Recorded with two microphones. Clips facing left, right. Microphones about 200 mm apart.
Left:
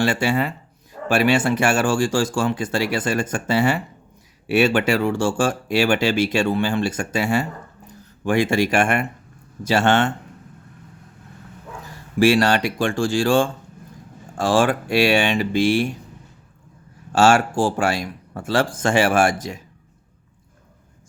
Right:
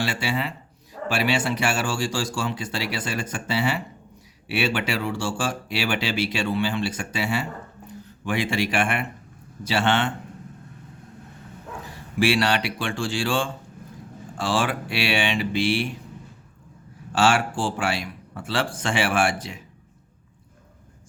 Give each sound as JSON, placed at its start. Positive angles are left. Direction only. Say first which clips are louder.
{"t": 0.0, "sound": "speech", "louder": "left 7 dB", "side_deg": 50}
{"t": 12.2, "sound": "speech", "louder": "left 5 dB", "side_deg": 45}
{"t": 17.1, "sound": "speech", "louder": "left 5 dB", "side_deg": 45}